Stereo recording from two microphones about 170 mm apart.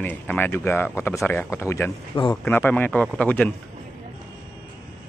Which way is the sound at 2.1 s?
25° left (ahead or behind).